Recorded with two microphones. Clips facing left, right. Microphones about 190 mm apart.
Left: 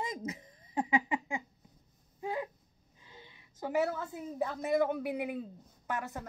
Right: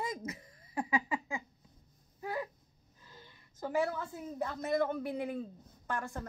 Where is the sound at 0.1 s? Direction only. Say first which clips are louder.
Left 2 dB; 15° left (ahead or behind).